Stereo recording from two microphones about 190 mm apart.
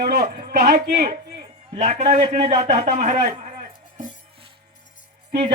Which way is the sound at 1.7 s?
35° right (ahead or behind).